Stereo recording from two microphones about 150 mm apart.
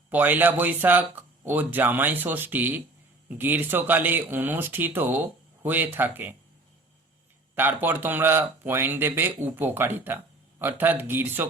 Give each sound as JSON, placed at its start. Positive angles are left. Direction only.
{"t": 0.1, "sound": "speech", "side_deg": -10}
{"t": 7.5, "sound": "speech", "side_deg": -15}